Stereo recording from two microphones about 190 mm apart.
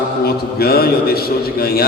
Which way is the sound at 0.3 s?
55° left (ahead or behind).